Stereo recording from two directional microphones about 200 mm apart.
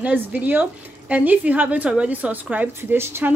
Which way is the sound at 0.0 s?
5° right (ahead or behind).